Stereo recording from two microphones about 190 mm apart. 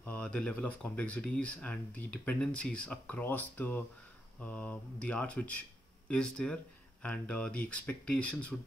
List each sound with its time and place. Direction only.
0.0 s speech: 5° left (ahead or behind)